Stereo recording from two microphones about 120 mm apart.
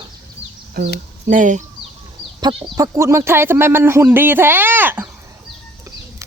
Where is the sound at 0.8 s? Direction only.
80° right.